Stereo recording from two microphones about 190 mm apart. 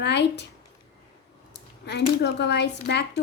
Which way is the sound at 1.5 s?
65° left (ahead or behind).